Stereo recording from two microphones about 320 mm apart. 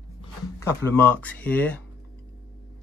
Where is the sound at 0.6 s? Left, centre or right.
Centre.